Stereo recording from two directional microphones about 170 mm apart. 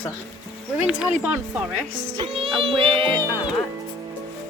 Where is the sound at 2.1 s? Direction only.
35° right (ahead or behind).